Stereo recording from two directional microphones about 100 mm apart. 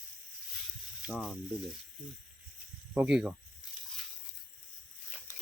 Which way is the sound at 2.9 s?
10° right (ahead or behind).